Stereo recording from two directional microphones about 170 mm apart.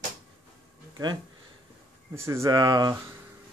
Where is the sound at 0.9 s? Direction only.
25° right (ahead or behind).